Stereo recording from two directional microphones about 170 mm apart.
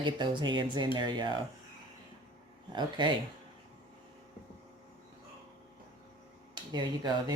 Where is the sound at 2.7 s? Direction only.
25° right (ahead or behind).